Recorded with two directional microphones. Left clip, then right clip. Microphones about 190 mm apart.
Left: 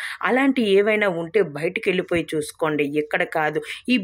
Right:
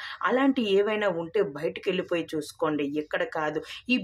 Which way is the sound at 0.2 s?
25° left (ahead or behind).